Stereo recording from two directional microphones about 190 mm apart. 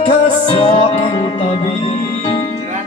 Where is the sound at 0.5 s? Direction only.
25° left (ahead or behind).